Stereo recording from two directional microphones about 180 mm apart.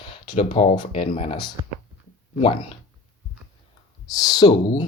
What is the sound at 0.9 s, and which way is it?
Speech, 30° left (ahead or behind).